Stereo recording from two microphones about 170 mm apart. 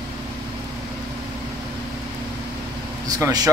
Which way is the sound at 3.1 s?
20° right (ahead or behind).